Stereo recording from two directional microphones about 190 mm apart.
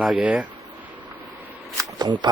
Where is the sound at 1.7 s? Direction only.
20° right (ahead or behind).